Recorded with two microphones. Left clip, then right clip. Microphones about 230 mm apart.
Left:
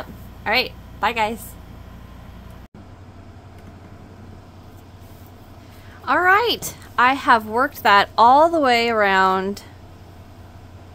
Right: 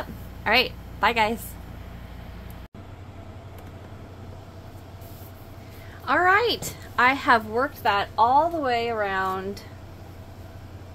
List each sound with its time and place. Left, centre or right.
0.4 s a woman's voice: centre
6.0 s a woman's voice: left
7.5 s a woman's voice: left